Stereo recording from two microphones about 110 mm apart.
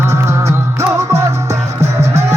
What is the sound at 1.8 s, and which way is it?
Music, 80° right.